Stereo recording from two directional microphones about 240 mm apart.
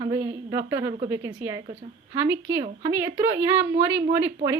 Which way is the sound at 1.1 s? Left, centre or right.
Centre.